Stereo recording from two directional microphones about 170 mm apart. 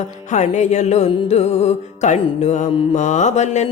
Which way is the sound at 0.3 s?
45° left (ahead or behind).